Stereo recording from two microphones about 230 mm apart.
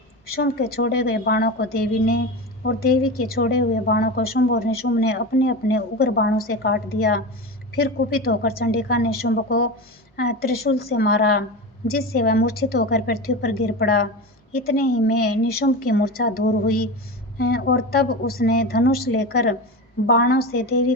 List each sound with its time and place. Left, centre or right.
0.3 s a woman's voice: left